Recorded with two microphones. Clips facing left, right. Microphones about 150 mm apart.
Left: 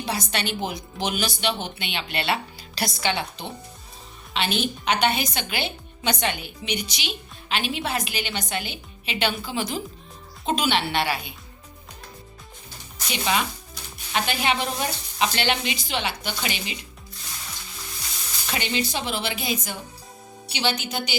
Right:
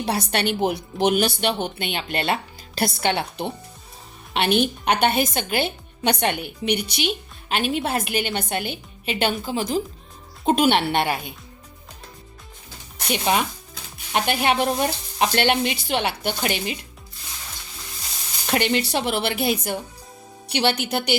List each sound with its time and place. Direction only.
0.0 s a woman's voice: 60° right (ahead or behind); by 9.8 s 40° right (ahead or behind)
10.4 s a woman's voice: 55° right (ahead or behind)
13.0 s a woman's voice: 50° right (ahead or behind)
18.5 s a woman's voice: 60° right (ahead or behind)